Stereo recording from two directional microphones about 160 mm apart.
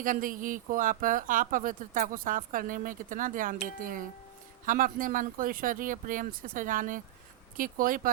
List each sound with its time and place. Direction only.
0.0 s speech: 60° right (ahead or behind)